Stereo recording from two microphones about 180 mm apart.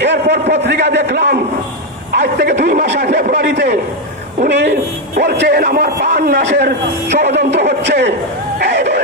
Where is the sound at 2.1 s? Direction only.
65° right (ahead or behind).